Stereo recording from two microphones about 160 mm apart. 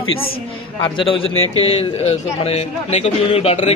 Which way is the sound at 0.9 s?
35° left (ahead or behind).